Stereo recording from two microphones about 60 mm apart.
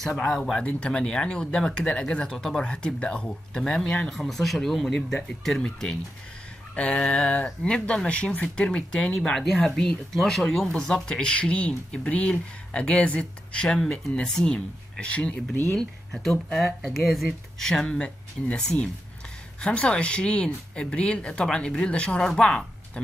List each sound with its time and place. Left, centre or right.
0.3 s speech: centre
0.7 s speech: centre
6.7 s a sound: left
7.6 s speech: centre
16.1 s speech: centre